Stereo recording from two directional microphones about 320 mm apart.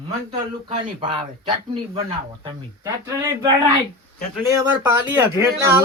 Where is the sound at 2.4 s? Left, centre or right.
Centre.